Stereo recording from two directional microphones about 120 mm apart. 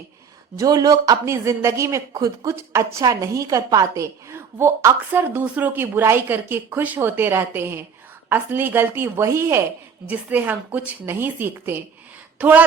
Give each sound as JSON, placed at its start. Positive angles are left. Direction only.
{"t": 0.5, "sound": "a woman's voice", "side_deg": -30}